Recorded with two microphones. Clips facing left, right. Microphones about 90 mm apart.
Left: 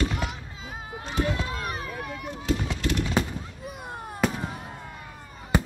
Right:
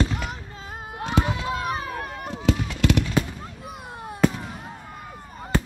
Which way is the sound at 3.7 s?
Centre (ahead or behind).